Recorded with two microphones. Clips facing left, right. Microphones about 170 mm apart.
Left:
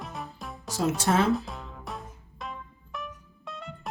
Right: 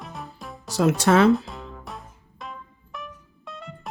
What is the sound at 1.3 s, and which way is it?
Music, centre (ahead or behind).